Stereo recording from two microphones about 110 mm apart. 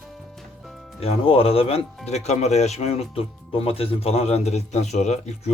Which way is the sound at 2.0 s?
90° left.